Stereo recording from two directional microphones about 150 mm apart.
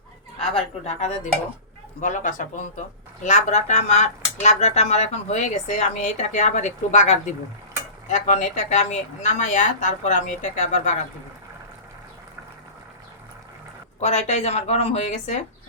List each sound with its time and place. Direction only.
0.9 s speech: 50° left (ahead or behind)
2.0 s speech: 60° left (ahead or behind)
14.0 s speech: 45° left (ahead or behind)